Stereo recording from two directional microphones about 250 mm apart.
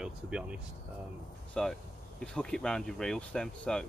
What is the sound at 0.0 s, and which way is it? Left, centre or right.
Speech, centre.